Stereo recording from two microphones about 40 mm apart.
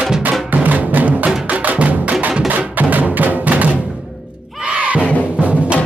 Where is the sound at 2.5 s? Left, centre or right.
Right.